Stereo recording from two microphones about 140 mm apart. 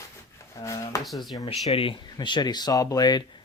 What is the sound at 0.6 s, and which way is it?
Speech, 25° left (ahead or behind).